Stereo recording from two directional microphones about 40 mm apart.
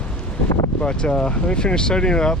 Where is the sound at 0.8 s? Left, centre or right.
Left.